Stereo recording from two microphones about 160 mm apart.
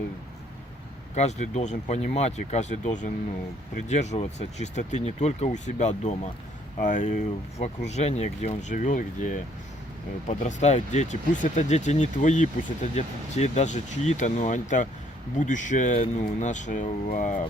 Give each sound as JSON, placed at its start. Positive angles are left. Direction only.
{"t": 1.1, "sound": "speech", "side_deg": 45}